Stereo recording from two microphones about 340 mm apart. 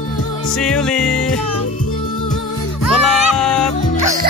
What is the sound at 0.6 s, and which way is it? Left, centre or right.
Music, centre.